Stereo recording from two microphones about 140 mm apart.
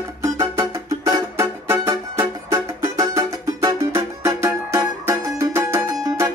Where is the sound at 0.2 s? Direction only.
25° right (ahead or behind).